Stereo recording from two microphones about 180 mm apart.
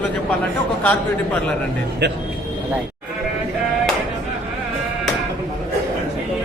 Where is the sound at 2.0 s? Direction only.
75° right (ahead or behind).